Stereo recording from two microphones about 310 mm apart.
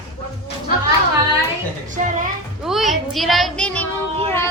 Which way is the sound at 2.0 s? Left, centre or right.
Right.